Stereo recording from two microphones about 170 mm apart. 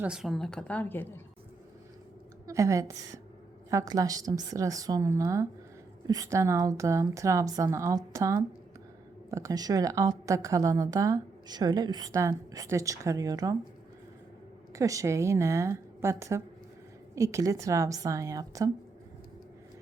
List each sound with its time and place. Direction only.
0.0 s a woman's voice: 5° right (ahead or behind); by 1.2 s 10° left (ahead or behind)
2.5 s a woman's voice: 20° right (ahead or behind)
14.7 s a woman's voice: 20° right (ahead or behind)